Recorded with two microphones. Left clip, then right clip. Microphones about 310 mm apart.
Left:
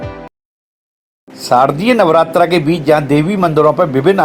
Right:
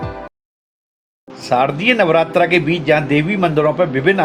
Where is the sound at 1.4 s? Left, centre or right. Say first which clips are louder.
Left 4 dB; centre.